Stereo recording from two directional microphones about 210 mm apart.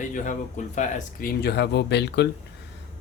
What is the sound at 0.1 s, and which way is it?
Speech, 35° left (ahead or behind).